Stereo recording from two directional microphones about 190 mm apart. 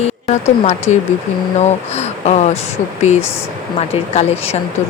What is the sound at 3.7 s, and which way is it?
Speech, 35° left (ahead or behind).